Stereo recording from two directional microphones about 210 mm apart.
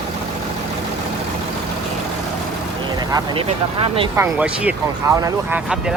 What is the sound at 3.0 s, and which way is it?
Vehicle, 20° right (ahead or behind).